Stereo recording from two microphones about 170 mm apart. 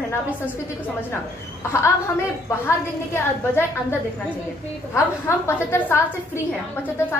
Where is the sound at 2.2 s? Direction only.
15° left (ahead or behind).